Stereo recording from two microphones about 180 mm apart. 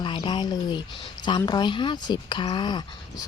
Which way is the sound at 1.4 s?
25° left (ahead or behind).